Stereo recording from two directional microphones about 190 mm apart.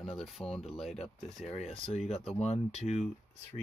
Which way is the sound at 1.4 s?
35° left (ahead or behind).